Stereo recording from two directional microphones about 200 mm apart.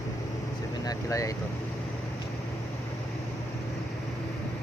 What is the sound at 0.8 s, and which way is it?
Speech, 15° left (ahead or behind).